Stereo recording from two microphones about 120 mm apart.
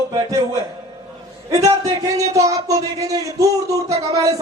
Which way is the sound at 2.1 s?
25° right (ahead or behind).